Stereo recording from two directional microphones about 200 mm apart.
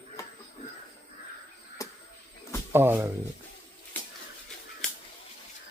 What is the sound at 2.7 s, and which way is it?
Speech, 10° right (ahead or behind).